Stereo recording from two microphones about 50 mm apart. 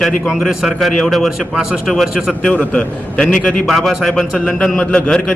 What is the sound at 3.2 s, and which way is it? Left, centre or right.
Speech, centre.